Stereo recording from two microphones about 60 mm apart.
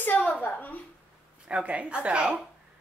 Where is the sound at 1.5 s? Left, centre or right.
Right.